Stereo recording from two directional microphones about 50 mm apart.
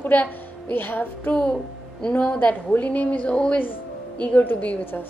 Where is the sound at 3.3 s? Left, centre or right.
Centre.